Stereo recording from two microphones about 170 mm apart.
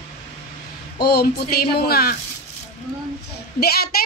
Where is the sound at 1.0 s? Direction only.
70° left (ahead or behind).